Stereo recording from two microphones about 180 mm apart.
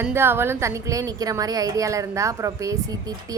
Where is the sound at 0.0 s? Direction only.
10° right (ahead or behind).